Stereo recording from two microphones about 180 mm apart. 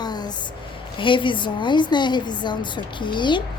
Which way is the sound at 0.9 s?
30° left (ahead or behind).